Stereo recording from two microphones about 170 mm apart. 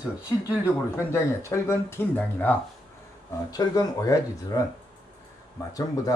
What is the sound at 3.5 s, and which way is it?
Speech, 20° left (ahead or behind).